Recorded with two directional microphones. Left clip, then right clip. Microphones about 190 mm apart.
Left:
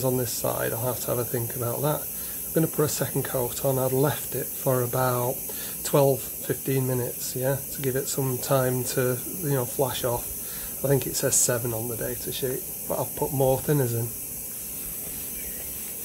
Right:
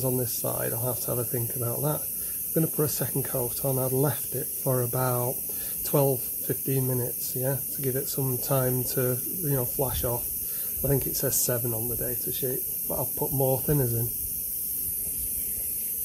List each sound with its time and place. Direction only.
0.0 s speech: 25° right (ahead or behind)